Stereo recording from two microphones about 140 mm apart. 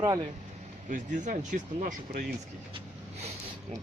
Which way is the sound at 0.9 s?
65° right (ahead or behind).